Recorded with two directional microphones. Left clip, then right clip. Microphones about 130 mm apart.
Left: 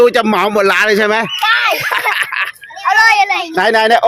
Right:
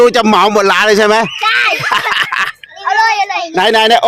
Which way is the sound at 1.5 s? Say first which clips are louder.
Even; 15° left (ahead or behind).